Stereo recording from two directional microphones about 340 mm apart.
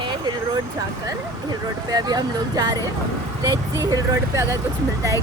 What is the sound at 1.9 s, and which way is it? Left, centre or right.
Speech, centre.